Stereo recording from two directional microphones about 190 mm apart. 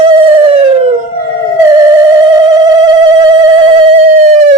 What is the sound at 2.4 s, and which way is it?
Telephone, 20° right (ahead or behind).